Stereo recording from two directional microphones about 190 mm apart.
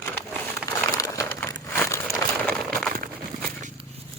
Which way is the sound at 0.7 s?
15° left (ahead or behind).